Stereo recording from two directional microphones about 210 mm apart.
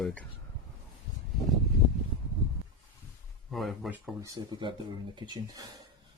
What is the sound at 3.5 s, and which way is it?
Speech, centre (ahead or behind).